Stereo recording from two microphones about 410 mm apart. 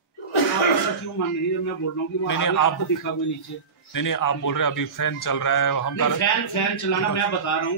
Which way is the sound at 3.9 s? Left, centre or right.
Left.